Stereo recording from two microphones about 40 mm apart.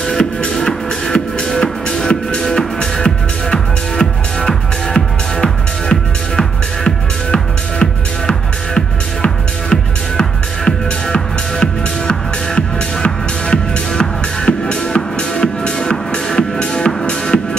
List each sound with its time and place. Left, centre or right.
0.6 s music: centre
7.8 s music: left
9.7 s music: centre
11.6 s music: left